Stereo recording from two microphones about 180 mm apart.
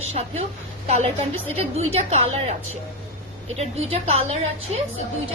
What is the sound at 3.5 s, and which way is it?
A woman's voice, 35° right (ahead or behind).